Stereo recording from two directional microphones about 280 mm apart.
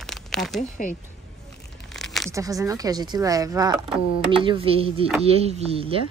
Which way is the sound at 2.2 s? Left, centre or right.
Centre.